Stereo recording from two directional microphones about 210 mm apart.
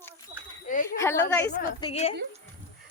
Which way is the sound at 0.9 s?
10° left (ahead or behind).